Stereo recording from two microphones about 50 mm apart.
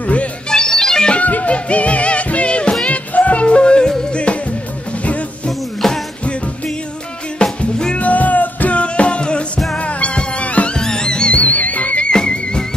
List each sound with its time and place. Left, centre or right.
0.0 s music: left
0.5 s music: centre
1.1 s music: left
5.5 s music: centre
7.4 s music: centre
7.9 s music: left
10.8 s music: centre
12.1 s music: centre